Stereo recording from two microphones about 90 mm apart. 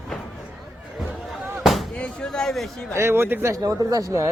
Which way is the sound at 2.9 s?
30° right (ahead or behind).